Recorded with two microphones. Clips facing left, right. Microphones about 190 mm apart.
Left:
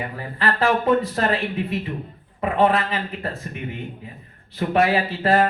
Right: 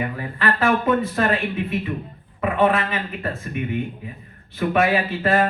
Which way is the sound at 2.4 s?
35° left (ahead or behind).